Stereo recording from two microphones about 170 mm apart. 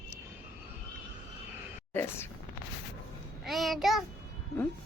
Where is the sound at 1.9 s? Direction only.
15° left (ahead or behind).